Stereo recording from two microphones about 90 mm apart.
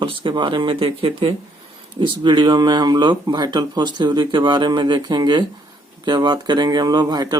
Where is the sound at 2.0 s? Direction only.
60° right (ahead or behind).